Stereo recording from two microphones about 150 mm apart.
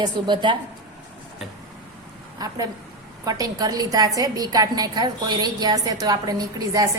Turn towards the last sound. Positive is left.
turn(degrees=-25)  # may be behind; listen again after turning